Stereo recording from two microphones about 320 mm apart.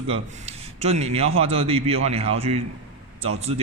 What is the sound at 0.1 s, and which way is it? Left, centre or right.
A man's voice, centre.